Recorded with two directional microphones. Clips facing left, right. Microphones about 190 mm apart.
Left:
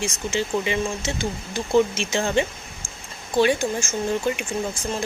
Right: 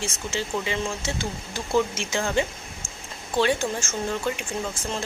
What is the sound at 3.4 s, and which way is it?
Speech, 10° left (ahead or behind).